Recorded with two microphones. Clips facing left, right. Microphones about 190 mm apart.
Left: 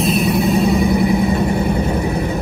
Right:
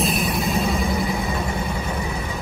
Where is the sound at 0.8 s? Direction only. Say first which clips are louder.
Left 9 dB; 60° left (ahead or behind).